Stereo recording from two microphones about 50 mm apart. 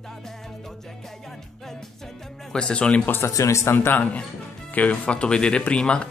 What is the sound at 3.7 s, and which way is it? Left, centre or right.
Speech, left.